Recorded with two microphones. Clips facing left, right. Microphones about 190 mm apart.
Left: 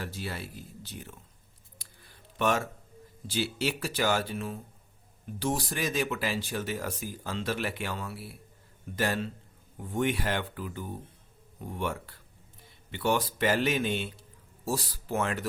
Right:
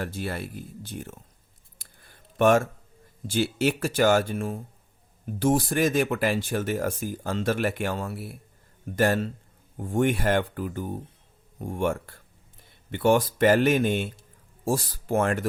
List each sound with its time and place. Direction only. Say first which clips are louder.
0.0 s speech: right 6 dB; 55° right (ahead or behind)
1.8 s a sound: right 2 dB; 50° right (ahead or behind)
3.2 s a man's voice: right 6 dB; 50° right (ahead or behind)